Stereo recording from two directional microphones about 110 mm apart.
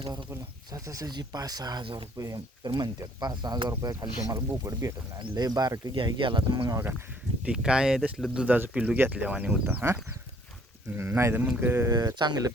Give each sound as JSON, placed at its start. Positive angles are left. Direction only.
{"t": 0.7, "sound": "speech", "side_deg": -35}
{"t": 2.1, "sound": "speech", "side_deg": -30}
{"t": 7.4, "sound": "speech", "side_deg": -5}
{"t": 9.6, "sound": "speech", "side_deg": -20}
{"t": 11.9, "sound": "speech", "side_deg": -35}